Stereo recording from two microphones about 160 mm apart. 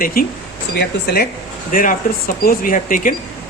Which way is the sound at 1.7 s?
55° left (ahead or behind).